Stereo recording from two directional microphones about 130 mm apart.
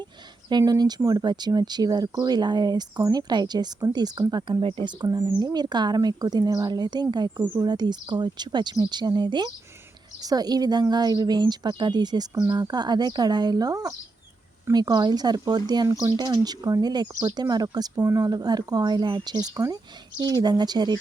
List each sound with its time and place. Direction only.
0.4 s speech: 30° right (ahead or behind)